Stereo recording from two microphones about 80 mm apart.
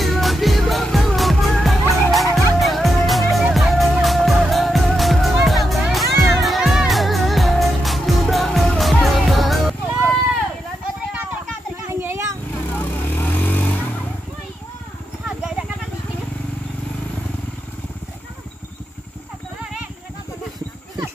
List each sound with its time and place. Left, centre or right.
0.0 s music: centre
11.9 s a sound: right
12.7 s vehicle: left
15.2 s wild animals: centre